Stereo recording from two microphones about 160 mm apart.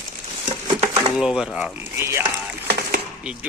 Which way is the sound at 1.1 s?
5° right (ahead or behind).